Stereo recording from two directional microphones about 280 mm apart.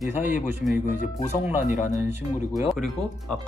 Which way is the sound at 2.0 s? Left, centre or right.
Centre.